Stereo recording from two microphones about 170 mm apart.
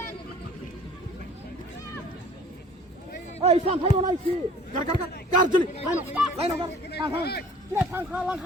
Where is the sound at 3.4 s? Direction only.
40° right (ahead or behind).